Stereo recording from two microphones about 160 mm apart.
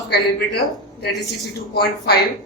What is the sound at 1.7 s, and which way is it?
Speech, 80° left.